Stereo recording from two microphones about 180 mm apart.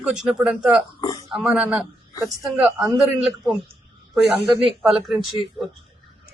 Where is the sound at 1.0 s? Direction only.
20° left (ahead or behind).